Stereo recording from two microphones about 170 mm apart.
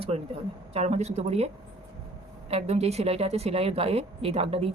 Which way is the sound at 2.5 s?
40° right (ahead or behind).